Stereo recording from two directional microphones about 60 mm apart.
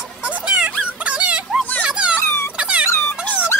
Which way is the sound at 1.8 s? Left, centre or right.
Centre.